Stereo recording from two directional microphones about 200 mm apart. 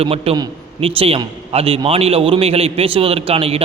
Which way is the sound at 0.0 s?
30° right (ahead or behind).